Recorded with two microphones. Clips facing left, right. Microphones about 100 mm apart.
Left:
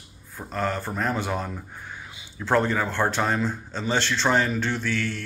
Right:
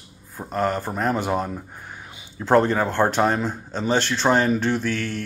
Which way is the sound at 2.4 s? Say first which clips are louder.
Right 4 dB; 30° right (ahead or behind).